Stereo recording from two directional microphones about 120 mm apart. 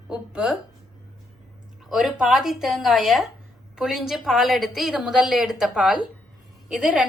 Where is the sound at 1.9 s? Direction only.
5° right (ahead or behind).